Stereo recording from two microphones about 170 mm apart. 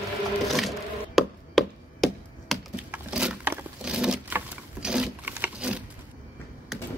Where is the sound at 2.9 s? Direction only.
5° right (ahead or behind).